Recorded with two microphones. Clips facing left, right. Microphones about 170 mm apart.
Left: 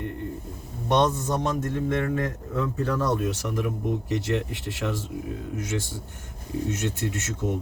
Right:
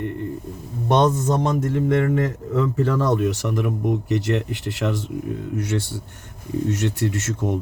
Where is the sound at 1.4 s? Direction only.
80° right.